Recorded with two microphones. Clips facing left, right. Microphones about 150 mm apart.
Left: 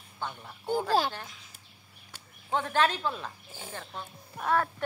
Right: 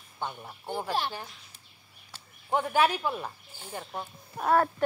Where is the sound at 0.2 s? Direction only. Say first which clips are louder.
Right 2 dB; 15° right (ahead or behind).